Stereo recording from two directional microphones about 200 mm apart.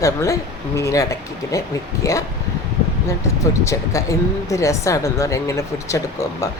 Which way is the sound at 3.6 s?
15° left (ahead or behind).